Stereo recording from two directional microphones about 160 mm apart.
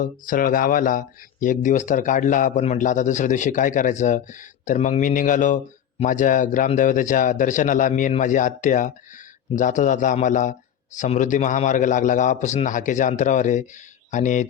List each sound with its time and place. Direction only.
0.0 s speech: 55° left (ahead or behind)